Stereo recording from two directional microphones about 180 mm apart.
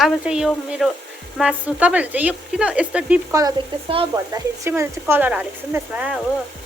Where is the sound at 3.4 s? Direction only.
25° right (ahead or behind).